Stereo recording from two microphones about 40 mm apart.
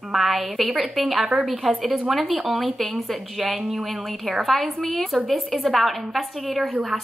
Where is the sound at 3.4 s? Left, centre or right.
Centre.